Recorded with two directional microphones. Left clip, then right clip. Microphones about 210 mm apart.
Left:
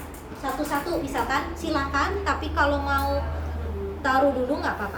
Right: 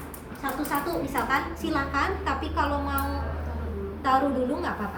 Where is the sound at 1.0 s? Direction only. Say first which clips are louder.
Left 1 dB; 15° left (ahead or behind).